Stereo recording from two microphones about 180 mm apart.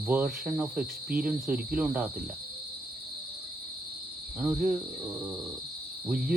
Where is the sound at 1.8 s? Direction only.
10° right (ahead or behind).